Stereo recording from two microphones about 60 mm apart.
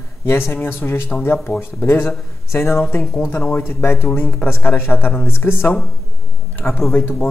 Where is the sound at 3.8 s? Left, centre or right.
Left.